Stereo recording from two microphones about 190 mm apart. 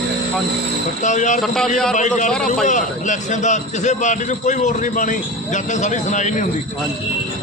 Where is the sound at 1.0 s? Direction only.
40° left (ahead or behind).